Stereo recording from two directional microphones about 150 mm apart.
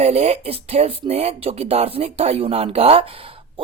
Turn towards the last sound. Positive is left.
turn(degrees=-40)  # may be behind; listen again after turning